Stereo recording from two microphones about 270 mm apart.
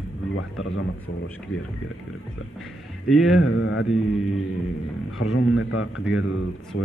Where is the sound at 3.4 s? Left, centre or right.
Left.